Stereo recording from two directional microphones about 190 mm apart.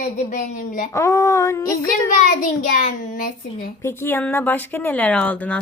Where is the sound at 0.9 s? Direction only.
15° left (ahead or behind).